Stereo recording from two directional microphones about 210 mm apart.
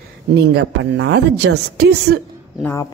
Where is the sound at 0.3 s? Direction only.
60° right (ahead or behind).